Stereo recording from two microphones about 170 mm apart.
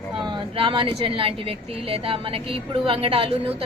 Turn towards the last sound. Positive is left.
turn(degrees=-35)  # may be behind; listen again after turning